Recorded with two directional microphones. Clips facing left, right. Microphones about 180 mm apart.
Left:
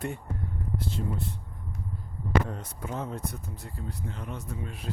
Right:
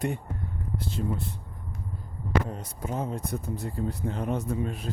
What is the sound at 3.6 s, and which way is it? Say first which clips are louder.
Speech: right 8 dB; 50° right (ahead or behind).